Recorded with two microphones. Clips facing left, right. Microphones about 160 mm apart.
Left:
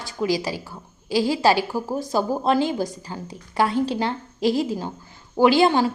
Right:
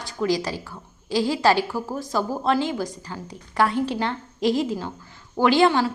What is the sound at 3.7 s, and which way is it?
Speech, 35° left (ahead or behind).